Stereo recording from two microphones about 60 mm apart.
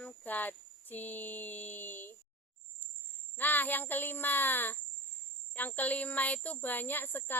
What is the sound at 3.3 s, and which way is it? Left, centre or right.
Speech, left.